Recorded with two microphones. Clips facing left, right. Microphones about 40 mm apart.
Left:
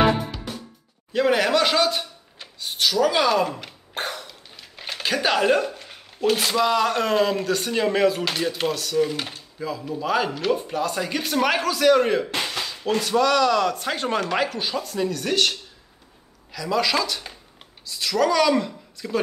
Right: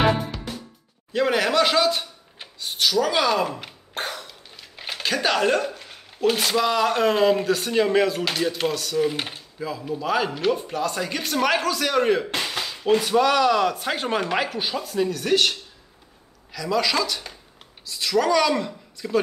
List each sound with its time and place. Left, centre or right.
0.3 s music: centre
1.1 s speech: centre
2.6 s a sound: centre
6.2 s speech: centre
9.1 s speech: centre
9.6 s speech: centre
12.4 s music: centre
12.8 s speech: centre
16.5 s speech: centre